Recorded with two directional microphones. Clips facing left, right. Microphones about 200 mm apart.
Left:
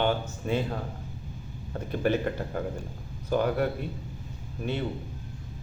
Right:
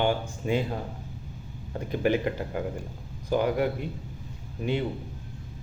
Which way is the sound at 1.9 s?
15° right (ahead or behind).